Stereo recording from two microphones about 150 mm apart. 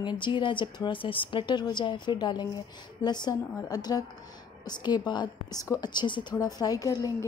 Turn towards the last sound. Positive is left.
turn(degrees=25)  # may be behind; listen again after turning